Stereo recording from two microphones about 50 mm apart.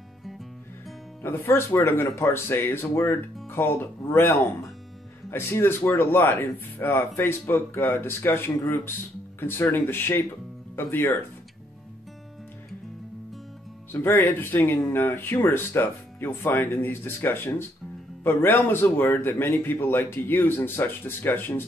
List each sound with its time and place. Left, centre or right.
1.2 s speech: left
14.2 s speech: left